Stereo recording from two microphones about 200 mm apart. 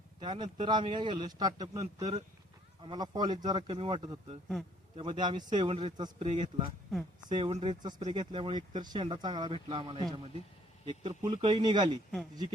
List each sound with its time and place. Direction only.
0.2 s speech: 20° right (ahead or behind)
11.4 s speech: 20° right (ahead or behind)